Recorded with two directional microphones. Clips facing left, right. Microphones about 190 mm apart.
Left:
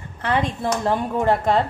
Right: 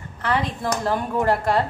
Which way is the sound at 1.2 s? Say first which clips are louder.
Left 2 dB; 25° left (ahead or behind).